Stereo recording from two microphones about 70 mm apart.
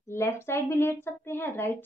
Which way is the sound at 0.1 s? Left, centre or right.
Left.